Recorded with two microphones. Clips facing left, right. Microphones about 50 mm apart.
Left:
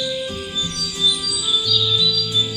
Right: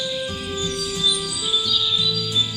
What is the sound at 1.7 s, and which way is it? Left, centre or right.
Music, right.